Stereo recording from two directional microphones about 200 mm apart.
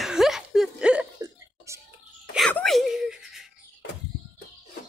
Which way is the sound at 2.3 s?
Centre (ahead or behind).